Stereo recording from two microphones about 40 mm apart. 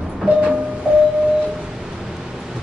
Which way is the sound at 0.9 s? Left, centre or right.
Right.